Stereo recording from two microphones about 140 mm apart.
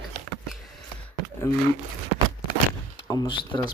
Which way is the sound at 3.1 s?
35° left (ahead or behind).